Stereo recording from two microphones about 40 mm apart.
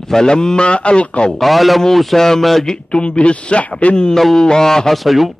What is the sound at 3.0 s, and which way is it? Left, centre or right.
Speech, left.